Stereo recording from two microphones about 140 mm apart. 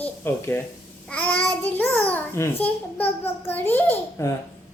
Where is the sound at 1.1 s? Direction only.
10° left (ahead or behind).